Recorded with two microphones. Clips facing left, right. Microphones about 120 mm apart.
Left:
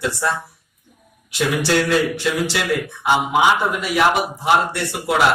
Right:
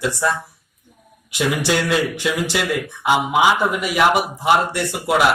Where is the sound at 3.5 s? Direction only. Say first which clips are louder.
Even; 15° right (ahead or behind).